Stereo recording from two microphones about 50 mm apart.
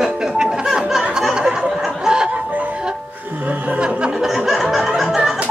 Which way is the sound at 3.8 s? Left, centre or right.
Centre.